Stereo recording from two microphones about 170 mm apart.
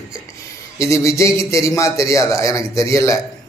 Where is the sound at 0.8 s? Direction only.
15° left (ahead or behind).